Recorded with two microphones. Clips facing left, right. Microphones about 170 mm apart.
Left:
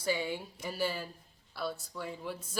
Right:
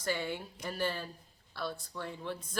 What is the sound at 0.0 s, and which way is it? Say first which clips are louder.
Speech: left 2 dB; 10° left (ahead or behind).